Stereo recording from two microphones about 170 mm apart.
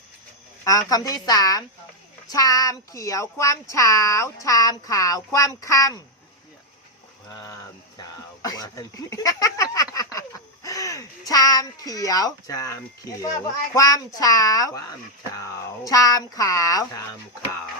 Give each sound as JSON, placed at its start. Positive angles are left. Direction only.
{"t": 0.6, "sound": "speech", "side_deg": 20}
{"t": 7.3, "sound": "speech", "side_deg": 20}